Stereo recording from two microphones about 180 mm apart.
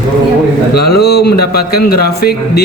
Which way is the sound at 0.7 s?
60° left (ahead or behind).